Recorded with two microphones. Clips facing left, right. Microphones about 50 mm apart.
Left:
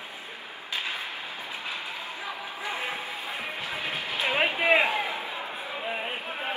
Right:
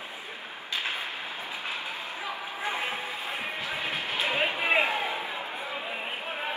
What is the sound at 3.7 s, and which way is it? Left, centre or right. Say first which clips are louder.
Music: even; right.